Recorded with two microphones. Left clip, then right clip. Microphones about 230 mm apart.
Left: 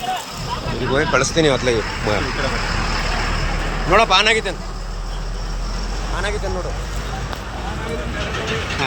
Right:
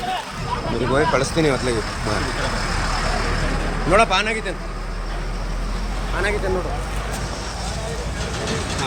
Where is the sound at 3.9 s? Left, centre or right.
Centre.